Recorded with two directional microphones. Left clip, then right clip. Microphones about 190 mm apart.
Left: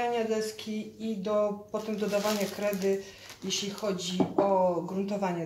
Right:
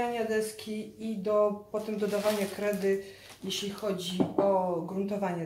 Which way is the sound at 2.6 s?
10° left (ahead or behind).